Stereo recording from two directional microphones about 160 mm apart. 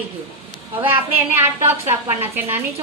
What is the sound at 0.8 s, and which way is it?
Speech, 30° right (ahead or behind).